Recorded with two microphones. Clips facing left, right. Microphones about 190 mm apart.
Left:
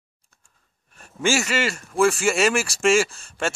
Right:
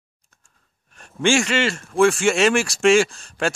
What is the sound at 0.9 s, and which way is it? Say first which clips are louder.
Speech: right 4 dB; 5° left (ahead or behind).